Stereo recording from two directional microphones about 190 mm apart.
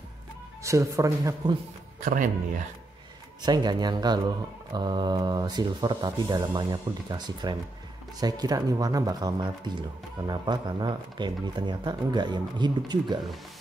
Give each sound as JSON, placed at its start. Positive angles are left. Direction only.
{"t": 0.7, "sound": "a man's voice", "side_deg": -15}
{"t": 2.0, "sound": "speech", "side_deg": -45}
{"t": 3.4, "sound": "speech", "side_deg": -20}